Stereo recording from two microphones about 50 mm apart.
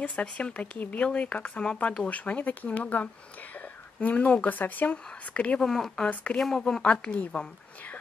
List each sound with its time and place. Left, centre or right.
0.1 s speech: left
5.6 s a woman's voice: centre
6.9 s speech: left